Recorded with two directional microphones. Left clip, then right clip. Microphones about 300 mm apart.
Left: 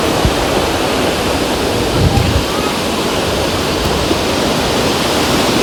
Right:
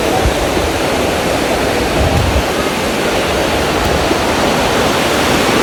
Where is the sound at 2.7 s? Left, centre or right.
Centre.